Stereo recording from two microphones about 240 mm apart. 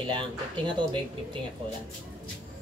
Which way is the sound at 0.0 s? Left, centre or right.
Centre.